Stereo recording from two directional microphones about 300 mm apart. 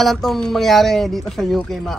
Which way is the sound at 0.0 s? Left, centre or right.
Centre.